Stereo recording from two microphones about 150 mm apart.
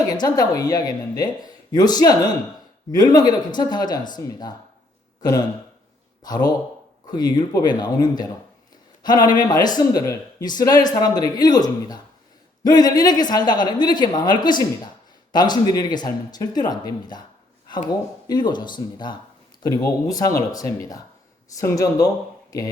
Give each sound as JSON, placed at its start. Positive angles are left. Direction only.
{"t": 0.1, "sound": "speech", "side_deg": 25}
{"t": 6.2, "sound": "speech", "side_deg": 25}
{"t": 18.3, "sound": "speech", "side_deg": 30}